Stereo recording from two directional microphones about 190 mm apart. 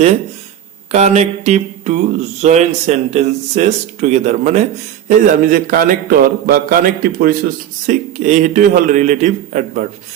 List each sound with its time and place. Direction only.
0.9 s speech: 35° right (ahead or behind)